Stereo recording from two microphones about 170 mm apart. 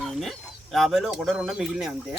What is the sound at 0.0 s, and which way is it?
Speech, centre (ahead or behind).